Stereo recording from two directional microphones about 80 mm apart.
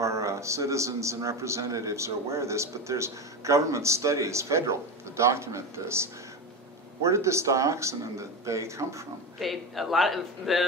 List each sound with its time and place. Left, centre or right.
0.0 s a man's voice: right
9.4 s a man's voice: centre